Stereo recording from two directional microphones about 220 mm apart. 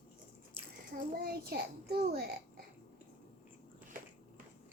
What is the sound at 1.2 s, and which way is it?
A child's voice, 45° right (ahead or behind).